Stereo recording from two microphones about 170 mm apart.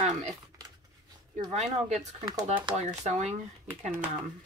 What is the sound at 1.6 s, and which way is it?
Speech, 40° right (ahead or behind).